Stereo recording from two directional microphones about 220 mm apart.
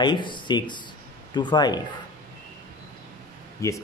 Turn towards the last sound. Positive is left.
turn(degrees=15)  # may be behind; listen again after turning